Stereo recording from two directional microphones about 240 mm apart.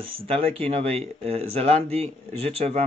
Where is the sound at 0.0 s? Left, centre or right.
Right.